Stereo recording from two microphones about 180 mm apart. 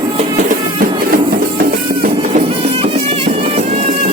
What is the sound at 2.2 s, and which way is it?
Music, 35° right (ahead or behind).